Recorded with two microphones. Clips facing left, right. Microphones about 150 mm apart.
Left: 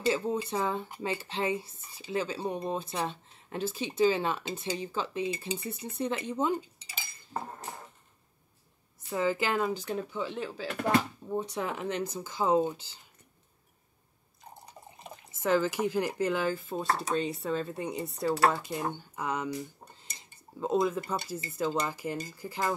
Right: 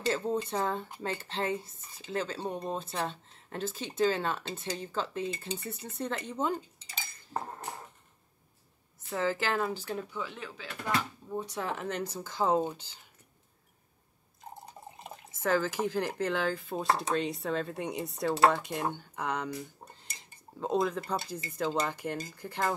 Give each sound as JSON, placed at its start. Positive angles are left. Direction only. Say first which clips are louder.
{"t": 0.0, "sound": "speech", "louder": "left 1 dB", "side_deg": 10}
{"t": 9.1, "sound": "speech", "louder": "left 2 dB", "side_deg": 15}
{"t": 10.7, "sound": "speech", "louder": "left 6 dB", "side_deg": 55}
{"t": 11.6, "sound": "speech", "louder": "left 2 dB", "side_deg": 20}
{"t": 15.4, "sound": "speech", "louder": "left 2 dB", "side_deg": 15}
{"t": 17.1, "sound": "cutlery", "louder": "left 1 dB", "side_deg": 0}
{"t": 19.1, "sound": "speech", "louder": "left 1 dB", "side_deg": 5}
{"t": 20.1, "sound": "cutlery", "louder": "right 1 dB", "side_deg": 0}